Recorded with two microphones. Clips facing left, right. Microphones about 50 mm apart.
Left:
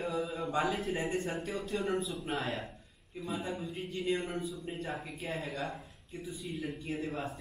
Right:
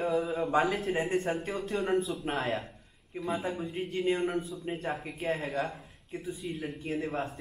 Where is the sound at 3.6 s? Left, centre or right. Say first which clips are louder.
Right 5 dB; right.